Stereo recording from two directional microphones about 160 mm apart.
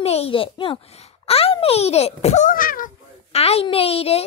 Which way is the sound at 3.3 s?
40° left (ahead or behind).